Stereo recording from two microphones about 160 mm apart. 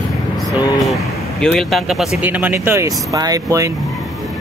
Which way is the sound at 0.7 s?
Centre (ahead or behind).